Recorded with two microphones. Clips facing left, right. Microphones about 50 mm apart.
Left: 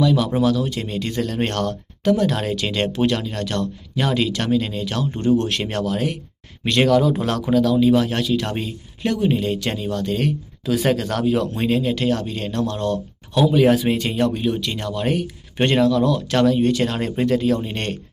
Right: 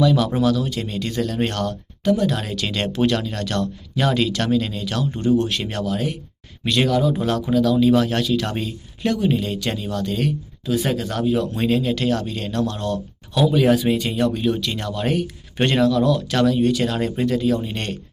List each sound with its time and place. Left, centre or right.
0.0 s speech: centre
0.4 s speech: left
2.4 s speech: left
5.2 s speech: left
7.4 s speech: left
7.8 s speech: centre; by 10.3 s left
10.8 s speech: left
11.5 s speech: left
13.7 s speech: left
14.3 s speech: centre
15.6 s speech: left